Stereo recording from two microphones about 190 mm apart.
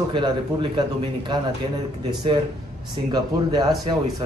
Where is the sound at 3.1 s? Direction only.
20° right (ahead or behind).